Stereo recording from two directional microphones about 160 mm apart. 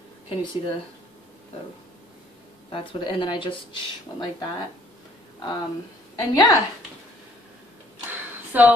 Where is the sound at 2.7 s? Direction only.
30° left (ahead or behind).